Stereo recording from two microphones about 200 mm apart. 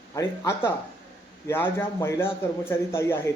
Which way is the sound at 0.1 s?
15° left (ahead or behind).